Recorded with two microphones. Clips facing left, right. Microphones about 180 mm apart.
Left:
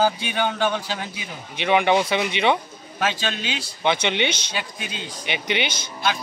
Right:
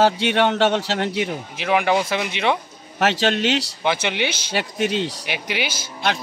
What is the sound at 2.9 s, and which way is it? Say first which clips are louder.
Speech: right 6 dB; 75° right (ahead or behind).